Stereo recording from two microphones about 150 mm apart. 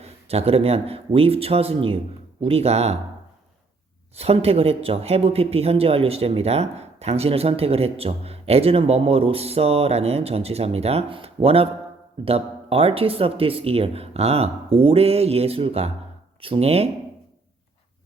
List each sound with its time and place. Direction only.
0.0 s speech: 45° right (ahead or behind)
4.2 s speech: 40° right (ahead or behind)